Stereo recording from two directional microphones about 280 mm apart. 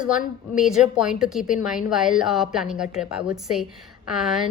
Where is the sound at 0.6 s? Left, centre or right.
Centre.